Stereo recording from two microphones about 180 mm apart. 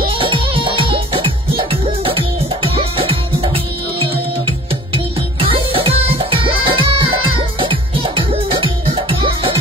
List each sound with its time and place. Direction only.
0.0 s music: 30° right (ahead or behind)
4.9 s music: 30° right (ahead or behind)